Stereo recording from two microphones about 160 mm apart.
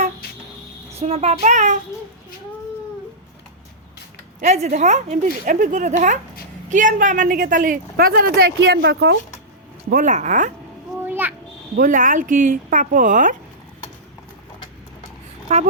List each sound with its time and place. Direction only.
0.9 s a woman's voice: 40° right (ahead or behind)
4.4 s a woman's voice: 50° right (ahead or behind); by 9.1 s 90° right
9.9 s a woman's voice: 50° right (ahead or behind)
11.0 s a sound: 10° right (ahead or behind)
11.8 s speech: 55° right (ahead or behind)
15.5 s a woman's voice: 45° right (ahead or behind)